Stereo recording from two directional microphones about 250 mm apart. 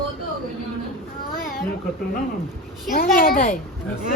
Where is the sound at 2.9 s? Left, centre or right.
Left.